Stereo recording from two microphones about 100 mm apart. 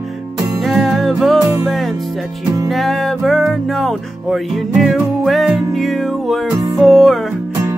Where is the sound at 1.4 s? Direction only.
35° right (ahead or behind).